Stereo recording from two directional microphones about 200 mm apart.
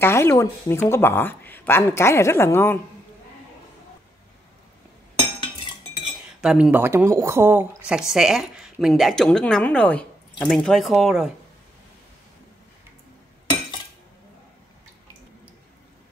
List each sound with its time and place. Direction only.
0.0 s speech: 15° left (ahead or behind)
5.2 s cutlery: 25° left (ahead or behind)
6.4 s a woman's voice: 5° right (ahead or behind)